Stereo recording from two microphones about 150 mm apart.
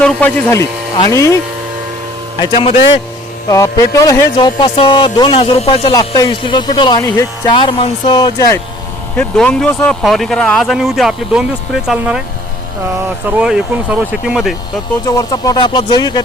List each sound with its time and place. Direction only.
0.0 s speech: 10° left (ahead or behind)
2.4 s speech: 35° left (ahead or behind)
3.5 s speech: 20° left (ahead or behind)
4.4 s speech: 30° left (ahead or behind)
6.0 s speech: 30° left (ahead or behind)
7.5 s speech: 30° left (ahead or behind)
9.1 s speech: 5° left (ahead or behind)
13.4 s speech: 5° right (ahead or behind)
15.0 s speech: 25° left (ahead or behind)